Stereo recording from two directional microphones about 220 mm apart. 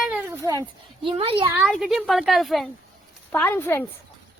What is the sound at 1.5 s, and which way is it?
Speech, 5° right (ahead or behind).